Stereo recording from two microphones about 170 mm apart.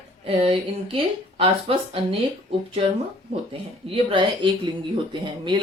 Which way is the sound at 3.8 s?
30° right (ahead or behind).